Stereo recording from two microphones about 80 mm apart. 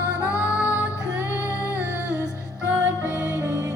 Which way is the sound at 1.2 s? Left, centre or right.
Left.